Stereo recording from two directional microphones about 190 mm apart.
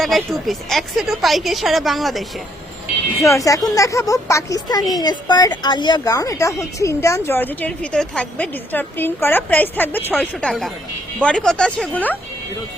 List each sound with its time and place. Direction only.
0.0 s a woman's voice: centre (ahead or behind)
3.2 s a woman's voice: 15° left (ahead or behind)